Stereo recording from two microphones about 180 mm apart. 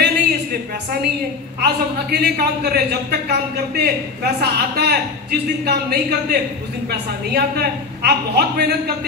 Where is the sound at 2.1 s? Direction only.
60° right (ahead or behind).